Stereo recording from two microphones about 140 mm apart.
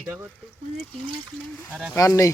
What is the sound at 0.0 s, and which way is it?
Speech, 20° right (ahead or behind).